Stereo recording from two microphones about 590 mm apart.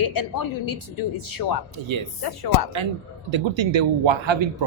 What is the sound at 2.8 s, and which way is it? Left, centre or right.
A man's voice, right.